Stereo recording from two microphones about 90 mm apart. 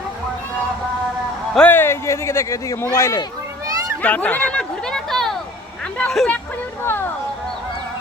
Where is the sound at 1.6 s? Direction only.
25° left (ahead or behind).